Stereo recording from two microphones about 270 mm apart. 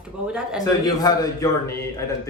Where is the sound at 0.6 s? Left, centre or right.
Centre.